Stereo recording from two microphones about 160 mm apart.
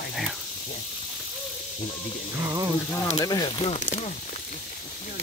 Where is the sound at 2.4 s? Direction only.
20° right (ahead or behind).